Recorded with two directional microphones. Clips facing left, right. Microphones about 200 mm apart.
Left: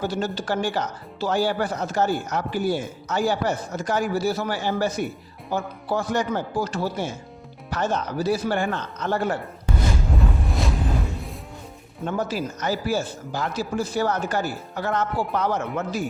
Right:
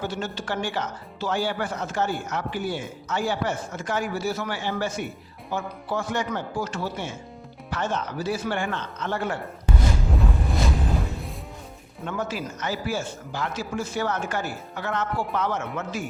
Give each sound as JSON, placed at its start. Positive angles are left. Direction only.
{"t": 0.0, "sound": "speech", "side_deg": 35}
{"t": 10.2, "sound": "music", "side_deg": 0}
{"t": 12.0, "sound": "speech", "side_deg": 35}